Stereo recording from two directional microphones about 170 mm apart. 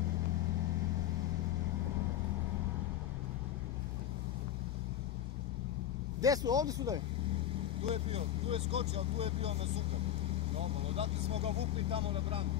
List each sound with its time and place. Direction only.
6.2 s speech: 20° right (ahead or behind)
7.9 s speech: 35° right (ahead or behind)